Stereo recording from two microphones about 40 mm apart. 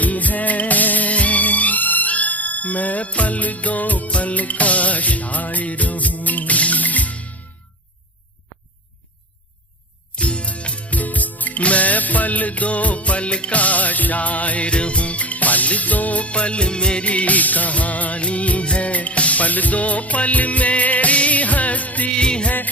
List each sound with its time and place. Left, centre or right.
0.0 s music: left
10.2 s music: left
22.1 s music: left